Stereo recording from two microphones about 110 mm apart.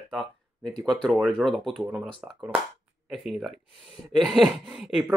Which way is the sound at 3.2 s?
Centre (ahead or behind).